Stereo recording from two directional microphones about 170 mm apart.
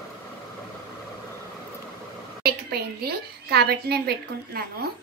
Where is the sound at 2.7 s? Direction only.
70° right (ahead or behind).